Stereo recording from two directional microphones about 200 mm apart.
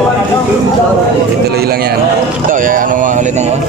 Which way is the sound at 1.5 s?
50° right (ahead or behind).